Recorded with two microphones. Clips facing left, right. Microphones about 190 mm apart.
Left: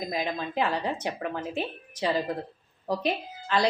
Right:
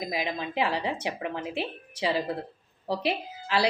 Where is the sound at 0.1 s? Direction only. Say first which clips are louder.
Left 1 dB; 5° right (ahead or behind).